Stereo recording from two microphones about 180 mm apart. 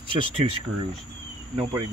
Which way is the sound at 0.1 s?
30° right (ahead or behind).